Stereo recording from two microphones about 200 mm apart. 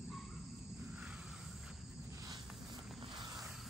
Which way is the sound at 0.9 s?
5° right (ahead or behind).